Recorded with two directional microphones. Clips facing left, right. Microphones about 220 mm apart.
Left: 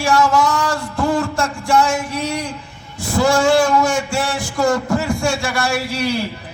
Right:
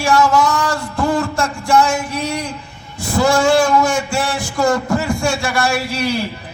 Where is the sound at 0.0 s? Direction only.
25° left (ahead or behind).